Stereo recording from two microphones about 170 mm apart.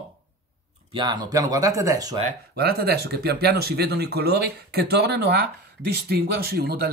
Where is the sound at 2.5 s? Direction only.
70° right (ahead or behind).